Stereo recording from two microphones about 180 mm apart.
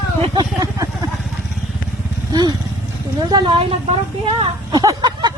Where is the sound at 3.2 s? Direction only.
25° right (ahead or behind).